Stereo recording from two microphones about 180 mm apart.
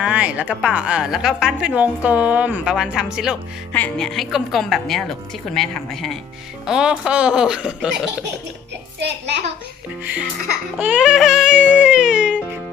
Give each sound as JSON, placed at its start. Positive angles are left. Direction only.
{"t": 0.0, "sound": "a woman's voice", "side_deg": -5}
{"t": 3.7, "sound": "speech", "side_deg": 10}
{"t": 9.0, "sound": "a child's voice", "side_deg": -75}
{"t": 10.8, "sound": "music", "side_deg": -5}